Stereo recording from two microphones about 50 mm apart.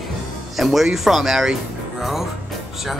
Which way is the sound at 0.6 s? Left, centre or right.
Centre.